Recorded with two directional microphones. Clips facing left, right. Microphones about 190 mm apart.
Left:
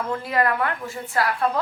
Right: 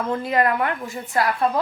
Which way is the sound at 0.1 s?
20° right (ahead or behind).